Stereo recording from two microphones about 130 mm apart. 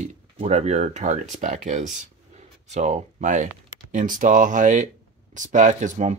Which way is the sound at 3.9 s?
90° right.